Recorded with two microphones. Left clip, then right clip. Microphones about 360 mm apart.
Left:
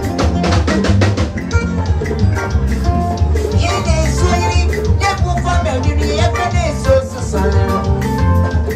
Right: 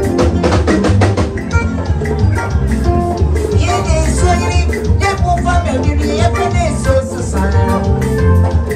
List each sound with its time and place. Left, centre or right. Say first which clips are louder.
5.0 s music: right 4 dB; centre